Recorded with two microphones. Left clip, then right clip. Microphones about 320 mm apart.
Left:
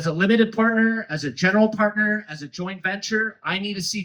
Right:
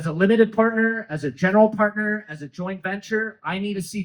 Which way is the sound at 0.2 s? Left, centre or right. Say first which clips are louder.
Right 3 dB; centre.